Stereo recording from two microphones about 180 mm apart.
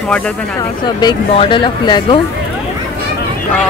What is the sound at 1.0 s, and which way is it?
Speech, 25° left (ahead or behind).